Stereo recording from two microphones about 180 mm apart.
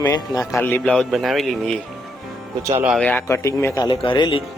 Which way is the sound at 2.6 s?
15° right (ahead or behind).